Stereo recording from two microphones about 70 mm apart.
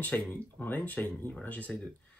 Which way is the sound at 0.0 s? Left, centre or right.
Left.